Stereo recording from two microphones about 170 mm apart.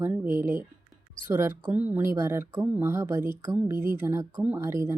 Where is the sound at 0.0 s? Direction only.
10° right (ahead or behind).